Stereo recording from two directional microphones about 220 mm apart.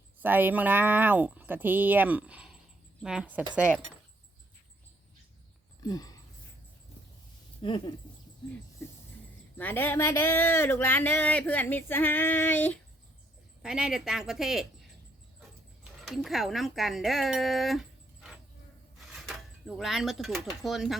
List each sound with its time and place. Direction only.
0.2 s a woman's voice: 10° right (ahead or behind)
5.8 s a sound: 15° left (ahead or behind)
7.6 s speech: 25° left (ahead or behind)
9.6 s speech: 10° left (ahead or behind)
13.6 s a woman's voice: 5° right (ahead or behind)
15.4 s dog: centre (ahead or behind)
19.3 s a woman's voice: centre (ahead or behind)